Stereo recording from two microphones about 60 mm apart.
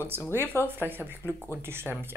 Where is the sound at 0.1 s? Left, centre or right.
Right.